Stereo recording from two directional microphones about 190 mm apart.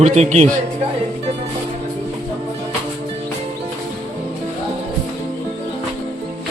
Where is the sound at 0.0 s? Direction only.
35° right (ahead or behind).